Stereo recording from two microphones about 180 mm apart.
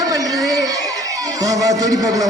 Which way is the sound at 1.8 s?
20° right (ahead or behind).